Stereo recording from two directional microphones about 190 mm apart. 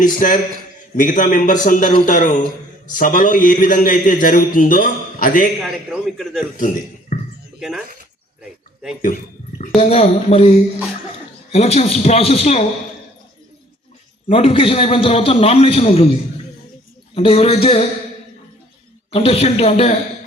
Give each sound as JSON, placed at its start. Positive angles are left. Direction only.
{"t": 0.2, "sound": "a man's voice", "side_deg": 45}
{"t": 5.6, "sound": "a man's voice", "side_deg": 0}
{"t": 6.6, "sound": "a sound", "side_deg": 45}
{"t": 8.4, "sound": "a sound", "side_deg": -5}
{"t": 9.0, "sound": "speech", "side_deg": 45}
{"t": 9.7, "sound": "a man's voice", "side_deg": 30}
{"t": 11.5, "sound": "a man's voice", "side_deg": 30}
{"t": 14.3, "sound": "a man's voice", "side_deg": 30}
{"t": 17.2, "sound": "a man's voice", "side_deg": 30}
{"t": 19.1, "sound": "a man's voice", "side_deg": 30}